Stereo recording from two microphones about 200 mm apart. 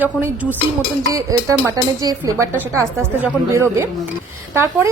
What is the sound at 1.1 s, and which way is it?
Speech, 15° right (ahead or behind).